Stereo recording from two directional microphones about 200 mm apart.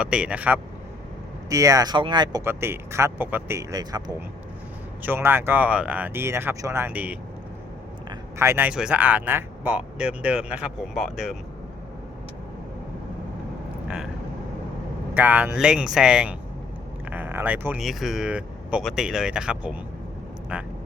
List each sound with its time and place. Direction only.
0.0 s speech: 5° right (ahead or behind)
8.4 s speech: 10° right (ahead or behind)
13.8 s vehicle: 5° right (ahead or behind)
15.1 s speech: 10° right (ahead or behind)